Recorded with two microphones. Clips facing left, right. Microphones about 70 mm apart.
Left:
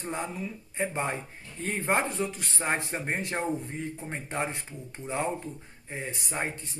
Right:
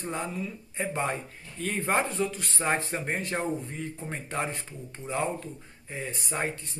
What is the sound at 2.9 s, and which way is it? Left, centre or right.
Speech, centre.